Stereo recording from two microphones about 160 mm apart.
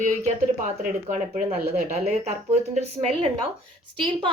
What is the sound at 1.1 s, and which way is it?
Speech, 50° right (ahead or behind).